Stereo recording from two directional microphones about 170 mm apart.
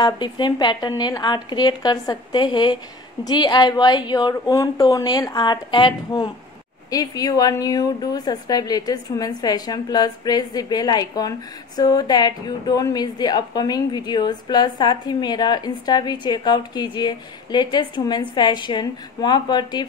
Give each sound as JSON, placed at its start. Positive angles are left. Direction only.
{"t": 0.0, "sound": "a woman's voice", "side_deg": 25}